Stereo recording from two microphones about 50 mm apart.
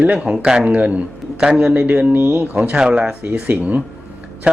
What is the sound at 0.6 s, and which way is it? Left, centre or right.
Speech, right.